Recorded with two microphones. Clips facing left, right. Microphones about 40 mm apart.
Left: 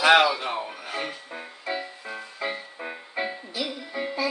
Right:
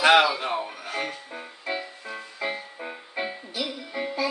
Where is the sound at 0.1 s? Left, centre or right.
Centre.